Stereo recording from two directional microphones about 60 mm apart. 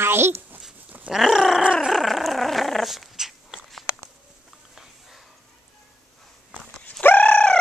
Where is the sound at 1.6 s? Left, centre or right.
Centre.